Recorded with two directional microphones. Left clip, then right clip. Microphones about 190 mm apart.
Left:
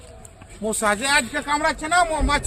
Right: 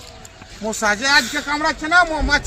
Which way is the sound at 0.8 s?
30° left (ahead or behind).